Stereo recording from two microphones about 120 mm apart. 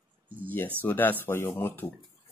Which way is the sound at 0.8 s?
15° left (ahead or behind).